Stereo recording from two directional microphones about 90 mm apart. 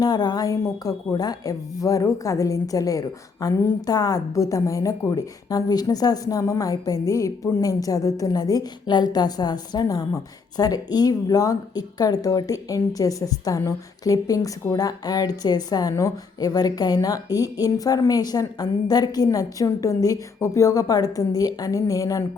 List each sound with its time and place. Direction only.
0.0 s a woman's voice: 50° left (ahead or behind)